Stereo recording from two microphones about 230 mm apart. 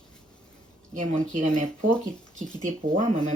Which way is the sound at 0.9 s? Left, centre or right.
Right.